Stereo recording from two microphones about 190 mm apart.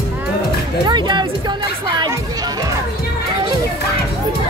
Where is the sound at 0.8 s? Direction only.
25° right (ahead or behind).